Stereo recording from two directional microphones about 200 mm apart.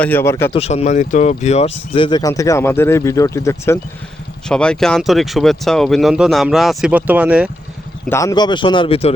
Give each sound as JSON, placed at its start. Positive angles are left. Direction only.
{"t": 0.0, "sound": "speech", "side_deg": 10}
{"t": 0.5, "sound": "speech", "side_deg": 30}
{"t": 4.4, "sound": "speech", "side_deg": 5}
{"t": 8.1, "sound": "speech", "side_deg": 15}